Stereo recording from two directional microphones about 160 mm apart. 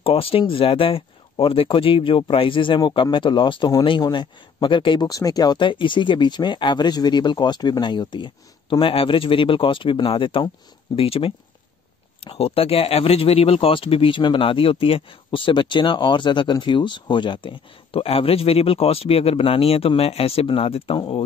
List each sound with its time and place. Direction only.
0.0 s speech: 35° left (ahead or behind)